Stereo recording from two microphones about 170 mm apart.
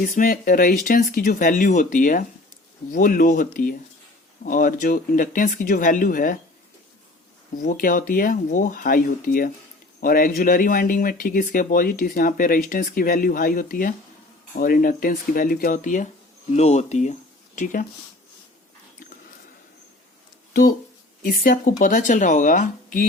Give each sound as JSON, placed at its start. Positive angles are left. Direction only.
{"t": 0.0, "sound": "speech", "side_deg": 55}
{"t": 7.5, "sound": "speech", "side_deg": 55}
{"t": 20.5, "sound": "speech", "side_deg": 55}